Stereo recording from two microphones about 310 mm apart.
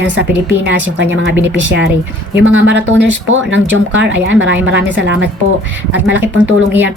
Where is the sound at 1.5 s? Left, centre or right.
Right.